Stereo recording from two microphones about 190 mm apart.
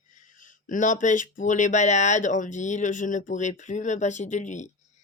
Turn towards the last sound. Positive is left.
turn(degrees=40)  # may be behind; listen again after turning